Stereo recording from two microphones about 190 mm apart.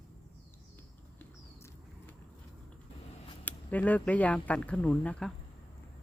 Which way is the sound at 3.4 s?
10° left (ahead or behind).